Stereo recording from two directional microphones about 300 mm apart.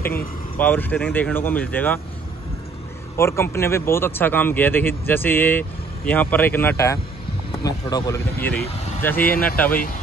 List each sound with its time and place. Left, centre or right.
0.0 s speech: centre
3.2 s speech: centre
9.2 s speech: left